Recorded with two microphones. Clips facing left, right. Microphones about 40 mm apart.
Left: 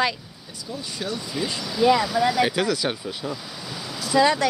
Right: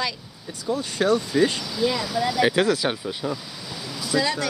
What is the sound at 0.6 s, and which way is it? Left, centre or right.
Speech, right.